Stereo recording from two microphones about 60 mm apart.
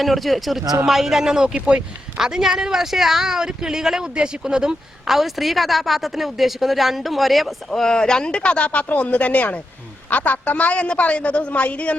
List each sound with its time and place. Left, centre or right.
0.0 s a man's voice: centre; by 11.9 s left